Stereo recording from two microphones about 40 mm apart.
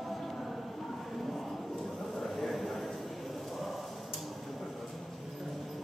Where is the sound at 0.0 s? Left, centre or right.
Centre.